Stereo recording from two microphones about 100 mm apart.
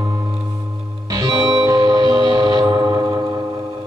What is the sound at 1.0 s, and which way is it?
Music, 35° right (ahead or behind).